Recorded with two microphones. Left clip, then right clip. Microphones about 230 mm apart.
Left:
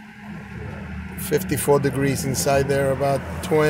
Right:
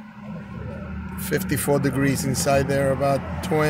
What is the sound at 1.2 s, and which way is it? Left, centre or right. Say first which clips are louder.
Speech: left 2 dB; centre.